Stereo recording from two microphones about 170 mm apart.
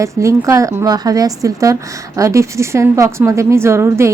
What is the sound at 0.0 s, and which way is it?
A woman's voice, 15° right (ahead or behind).